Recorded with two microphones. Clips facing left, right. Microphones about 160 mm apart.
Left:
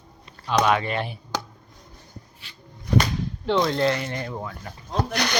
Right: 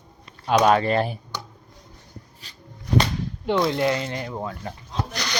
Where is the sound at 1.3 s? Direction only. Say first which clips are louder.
Left 5 dB; 90° left.